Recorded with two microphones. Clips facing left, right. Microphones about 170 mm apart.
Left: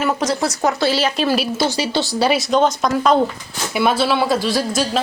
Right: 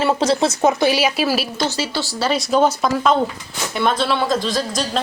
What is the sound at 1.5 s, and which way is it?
Speech, 15° left (ahead or behind).